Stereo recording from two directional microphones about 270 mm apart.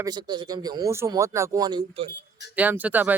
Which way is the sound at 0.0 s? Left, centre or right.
Centre.